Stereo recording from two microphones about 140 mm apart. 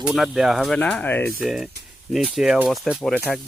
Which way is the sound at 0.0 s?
Centre (ahead or behind).